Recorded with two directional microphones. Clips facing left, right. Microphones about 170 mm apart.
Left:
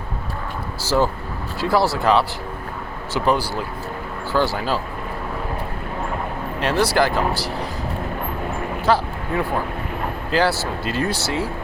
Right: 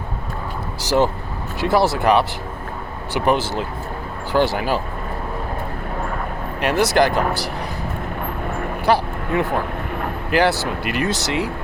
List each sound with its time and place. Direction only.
0.8 s speech: 20° right (ahead or behind)
6.6 s speech: 15° right (ahead or behind)
8.9 s speech: 15° right (ahead or behind)
10.3 s speech: 15° right (ahead or behind)